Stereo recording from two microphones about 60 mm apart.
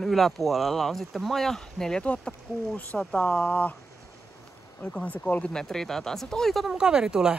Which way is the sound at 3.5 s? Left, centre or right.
Left.